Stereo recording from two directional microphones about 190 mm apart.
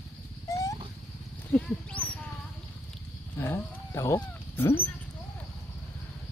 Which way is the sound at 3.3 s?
15° left (ahead or behind).